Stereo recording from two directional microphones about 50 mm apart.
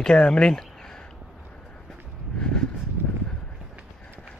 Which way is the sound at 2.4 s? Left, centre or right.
Centre.